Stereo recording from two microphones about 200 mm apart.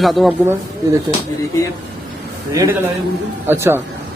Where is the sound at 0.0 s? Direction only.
Centre (ahead or behind).